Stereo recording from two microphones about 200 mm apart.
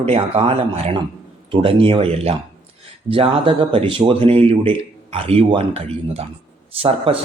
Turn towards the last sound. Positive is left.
turn(degrees=-30)  # may be behind; listen again after turning